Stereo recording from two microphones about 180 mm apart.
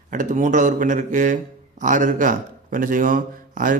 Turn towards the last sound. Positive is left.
turn(degrees=-50)  # may be behind; listen again after turning